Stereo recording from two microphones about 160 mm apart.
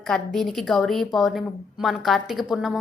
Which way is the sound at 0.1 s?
Centre (ahead or behind).